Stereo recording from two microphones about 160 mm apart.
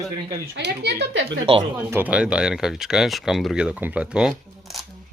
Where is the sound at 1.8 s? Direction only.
10° right (ahead or behind).